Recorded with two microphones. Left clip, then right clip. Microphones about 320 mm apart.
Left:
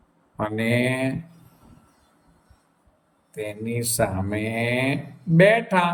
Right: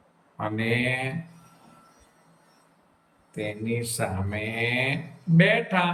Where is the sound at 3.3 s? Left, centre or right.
Centre.